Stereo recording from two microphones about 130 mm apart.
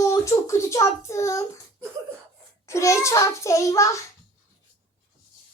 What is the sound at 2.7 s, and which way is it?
Hands, 25° left (ahead or behind).